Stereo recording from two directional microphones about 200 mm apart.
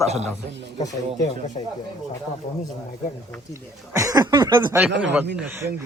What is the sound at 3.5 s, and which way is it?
A man's voice, 15° right (ahead or behind).